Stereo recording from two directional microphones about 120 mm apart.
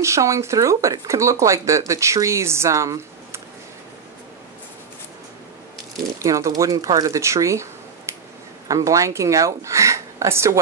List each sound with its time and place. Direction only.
0.0 s speech: 25° right (ahead or behind)
6.1 s speech: 25° right (ahead or behind)
8.1 s a sound: 25° right (ahead or behind)
8.6 s speech: 25° right (ahead or behind)